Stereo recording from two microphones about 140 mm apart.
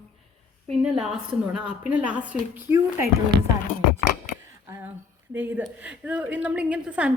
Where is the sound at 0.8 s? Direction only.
5° right (ahead or behind).